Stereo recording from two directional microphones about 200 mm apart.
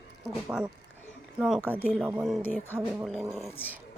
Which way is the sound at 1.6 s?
10° left (ahead or behind).